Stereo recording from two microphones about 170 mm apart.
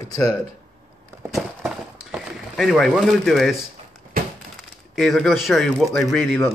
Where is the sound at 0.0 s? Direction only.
20° left (ahead or behind).